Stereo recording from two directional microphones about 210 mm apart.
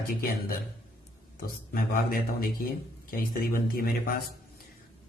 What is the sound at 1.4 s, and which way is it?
Speech, 45° left (ahead or behind).